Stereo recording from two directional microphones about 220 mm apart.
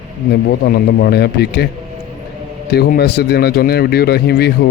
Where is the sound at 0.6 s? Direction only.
50° left (ahead or behind).